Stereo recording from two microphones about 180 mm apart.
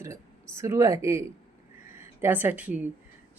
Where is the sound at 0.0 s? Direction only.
15° right (ahead or behind).